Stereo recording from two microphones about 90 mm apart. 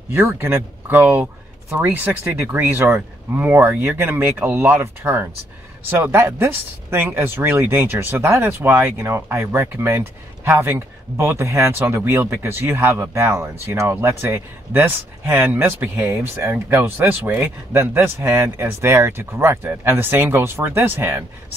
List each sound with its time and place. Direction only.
0.1 s speech: 25° right (ahead or behind)
2.4 s speech: 20° right (ahead or behind)